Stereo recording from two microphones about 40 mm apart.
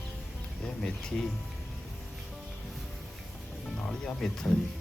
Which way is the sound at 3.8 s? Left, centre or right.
Centre.